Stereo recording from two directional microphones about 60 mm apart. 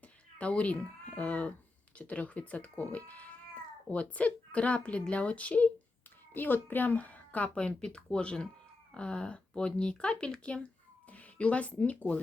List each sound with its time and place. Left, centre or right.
0.3 s speech: left